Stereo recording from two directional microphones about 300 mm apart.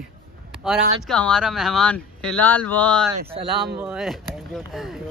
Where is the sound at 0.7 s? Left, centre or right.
Centre.